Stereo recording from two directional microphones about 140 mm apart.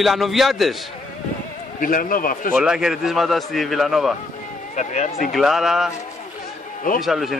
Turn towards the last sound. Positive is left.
turn(degrees=0)  # may be behind; listen again after turning